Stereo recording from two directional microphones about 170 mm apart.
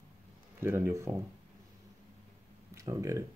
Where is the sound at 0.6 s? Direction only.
15° right (ahead or behind).